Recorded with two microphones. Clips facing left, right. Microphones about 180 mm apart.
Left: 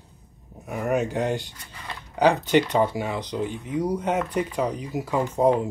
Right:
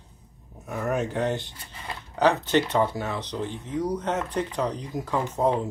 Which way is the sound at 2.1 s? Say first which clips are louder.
Left 2 dB; 10° left (ahead or behind).